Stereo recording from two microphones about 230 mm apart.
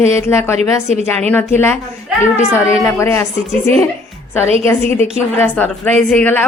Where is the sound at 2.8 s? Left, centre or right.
Centre.